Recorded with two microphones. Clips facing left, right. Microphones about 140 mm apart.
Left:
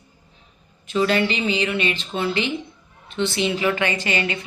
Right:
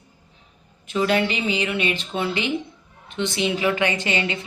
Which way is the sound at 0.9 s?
10° right (ahead or behind).